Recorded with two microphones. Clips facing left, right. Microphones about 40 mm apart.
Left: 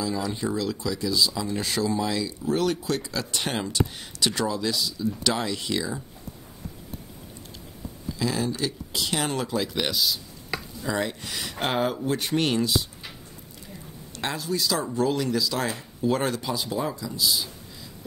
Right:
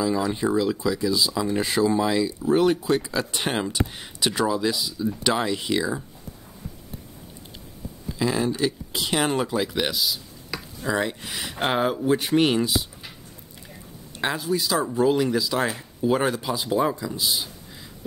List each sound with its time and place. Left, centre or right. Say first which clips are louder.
0.0 s speech: right 5 dB; centre
8.2 s speech: right 4 dB; centre
14.1 s speech: right 4 dB; centre
16.6 s speech: right 6 dB; right